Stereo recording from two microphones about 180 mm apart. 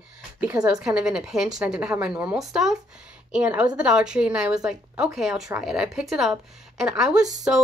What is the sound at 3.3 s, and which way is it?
A woman's voice, 5° right (ahead or behind).